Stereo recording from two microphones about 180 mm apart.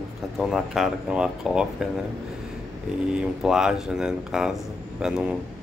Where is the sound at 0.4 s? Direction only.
Centre (ahead or behind).